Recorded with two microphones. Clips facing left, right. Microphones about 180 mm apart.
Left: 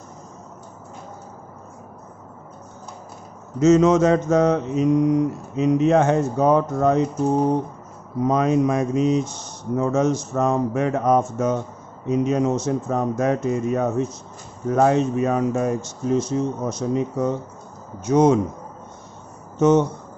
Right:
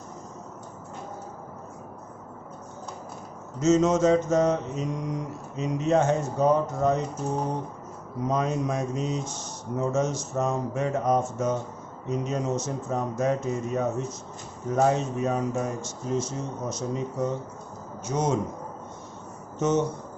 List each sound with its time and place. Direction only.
3.6 s mantra: 60° left (ahead or behind)
8.3 s speech: 70° left (ahead or behind)
9.7 s mantra: 65° left (ahead or behind)
14.7 s speech: 70° left (ahead or behind)
18.0 s mantra: 65° left (ahead or behind)
19.5 s speech: 65° left (ahead or behind)